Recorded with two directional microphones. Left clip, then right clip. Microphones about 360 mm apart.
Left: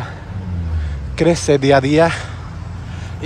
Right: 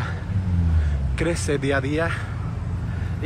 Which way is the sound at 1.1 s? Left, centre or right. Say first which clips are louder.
Left 10 dB; centre.